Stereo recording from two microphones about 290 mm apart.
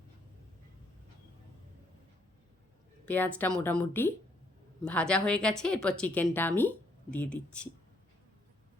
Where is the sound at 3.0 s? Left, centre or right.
Centre.